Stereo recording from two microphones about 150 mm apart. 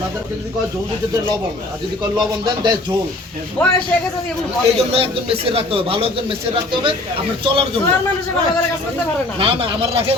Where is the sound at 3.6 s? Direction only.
10° left (ahead or behind).